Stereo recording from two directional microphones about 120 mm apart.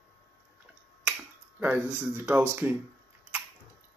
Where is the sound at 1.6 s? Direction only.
15° right (ahead or behind).